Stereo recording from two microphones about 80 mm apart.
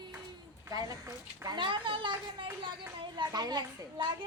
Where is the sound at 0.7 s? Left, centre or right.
Right.